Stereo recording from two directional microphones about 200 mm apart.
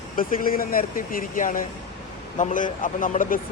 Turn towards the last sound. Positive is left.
turn(degrees=40)  # may be behind; listen again after turning